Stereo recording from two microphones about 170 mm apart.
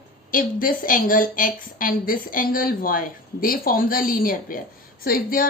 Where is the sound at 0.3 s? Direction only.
55° left (ahead or behind).